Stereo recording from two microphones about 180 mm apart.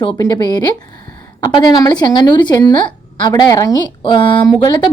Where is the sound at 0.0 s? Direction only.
25° left (ahead or behind).